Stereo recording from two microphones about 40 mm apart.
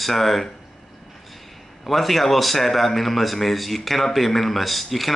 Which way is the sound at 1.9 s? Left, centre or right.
Centre.